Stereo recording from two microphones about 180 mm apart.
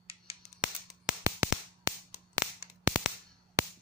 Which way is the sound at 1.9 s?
15° right (ahead or behind).